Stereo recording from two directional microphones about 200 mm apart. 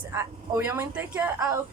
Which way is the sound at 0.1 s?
15° right (ahead or behind).